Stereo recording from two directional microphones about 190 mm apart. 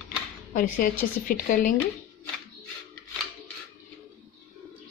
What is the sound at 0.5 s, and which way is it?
Speech, 45° left (ahead or behind).